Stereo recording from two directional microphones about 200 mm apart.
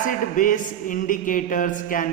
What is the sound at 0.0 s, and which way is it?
Speech, 40° left (ahead or behind).